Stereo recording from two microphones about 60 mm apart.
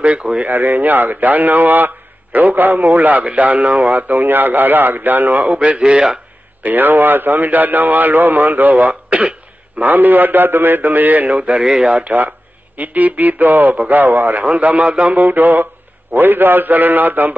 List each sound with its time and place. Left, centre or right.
0.0 s speech: centre
0.5 s a man's voice: right; by 6.1 s centre
6.6 s a man's voice: right; by 12.0 s centre
12.0 s speech: right
15.1 s a man's voice: right